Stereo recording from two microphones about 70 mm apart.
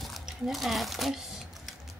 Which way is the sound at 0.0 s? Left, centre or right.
Centre.